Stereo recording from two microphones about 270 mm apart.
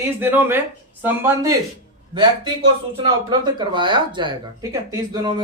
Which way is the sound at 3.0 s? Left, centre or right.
Centre.